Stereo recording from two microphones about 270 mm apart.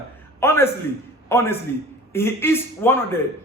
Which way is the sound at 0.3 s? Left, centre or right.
Centre.